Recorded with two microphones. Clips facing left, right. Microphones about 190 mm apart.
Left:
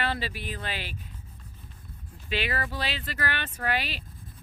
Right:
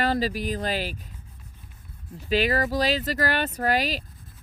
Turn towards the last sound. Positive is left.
turn(degrees=-40)  # may be behind; listen again after turning